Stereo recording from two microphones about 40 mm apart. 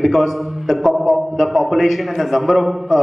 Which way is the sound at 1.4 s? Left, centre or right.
Centre.